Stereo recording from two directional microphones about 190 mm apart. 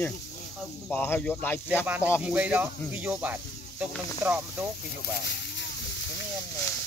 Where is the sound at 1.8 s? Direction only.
10° right (ahead or behind).